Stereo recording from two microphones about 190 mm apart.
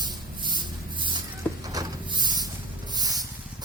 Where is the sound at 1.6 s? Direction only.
20° right (ahead or behind).